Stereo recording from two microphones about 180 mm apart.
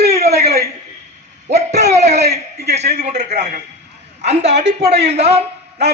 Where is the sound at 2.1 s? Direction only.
65° right (ahead or behind).